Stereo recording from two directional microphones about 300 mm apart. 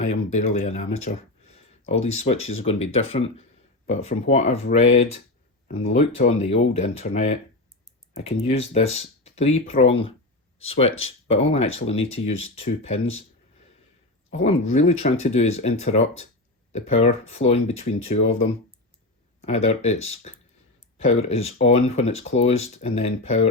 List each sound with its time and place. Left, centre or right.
0.0 s speech: left
14.4 s speech: left
19.4 s speech: left